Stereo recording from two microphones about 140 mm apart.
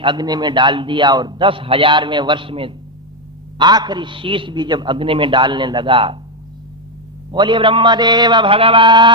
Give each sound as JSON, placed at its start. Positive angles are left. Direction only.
{"t": 0.0, "sound": "a man's voice", "side_deg": -30}
{"t": 7.3, "sound": "a man's voice", "side_deg": -35}